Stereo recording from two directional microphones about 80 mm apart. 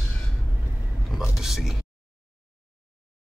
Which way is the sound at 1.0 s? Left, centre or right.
Centre.